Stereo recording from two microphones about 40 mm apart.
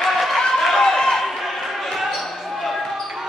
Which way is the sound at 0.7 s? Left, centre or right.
Centre.